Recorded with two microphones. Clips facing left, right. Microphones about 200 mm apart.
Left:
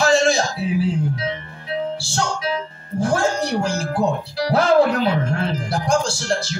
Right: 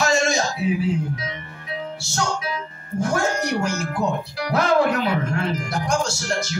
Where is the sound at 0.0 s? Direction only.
30° left (ahead or behind).